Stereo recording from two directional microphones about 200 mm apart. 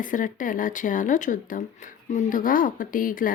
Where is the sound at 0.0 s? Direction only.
40° left (ahead or behind).